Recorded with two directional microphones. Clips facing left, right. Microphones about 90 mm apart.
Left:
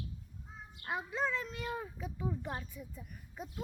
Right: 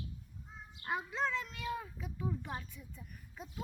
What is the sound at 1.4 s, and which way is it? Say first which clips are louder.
A child's voice: left 1 dB; 25° left (ahead or behind).